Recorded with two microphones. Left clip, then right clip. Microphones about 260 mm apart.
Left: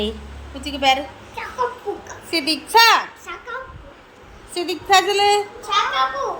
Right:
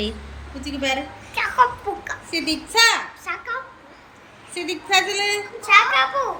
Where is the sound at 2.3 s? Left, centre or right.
Centre.